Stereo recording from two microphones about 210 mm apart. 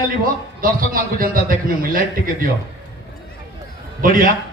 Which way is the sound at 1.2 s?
45° right (ahead or behind).